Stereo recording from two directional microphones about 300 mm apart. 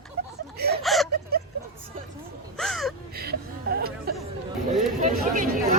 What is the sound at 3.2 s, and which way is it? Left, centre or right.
Chuckle, right.